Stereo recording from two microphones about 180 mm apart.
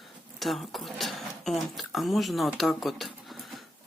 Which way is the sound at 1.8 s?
Centre (ahead or behind).